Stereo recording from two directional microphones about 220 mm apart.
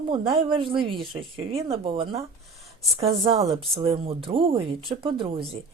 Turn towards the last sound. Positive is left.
turn(degrees=-25)  # may be behind; listen again after turning